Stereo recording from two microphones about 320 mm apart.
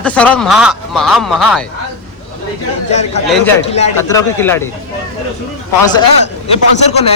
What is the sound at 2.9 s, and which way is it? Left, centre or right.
A man's voice, left.